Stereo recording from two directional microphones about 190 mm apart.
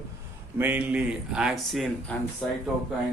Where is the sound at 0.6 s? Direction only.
10° right (ahead or behind).